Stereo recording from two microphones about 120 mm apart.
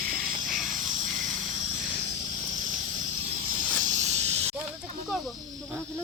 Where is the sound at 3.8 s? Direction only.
80° right.